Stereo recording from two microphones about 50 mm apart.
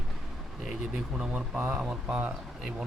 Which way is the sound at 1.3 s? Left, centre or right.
Right.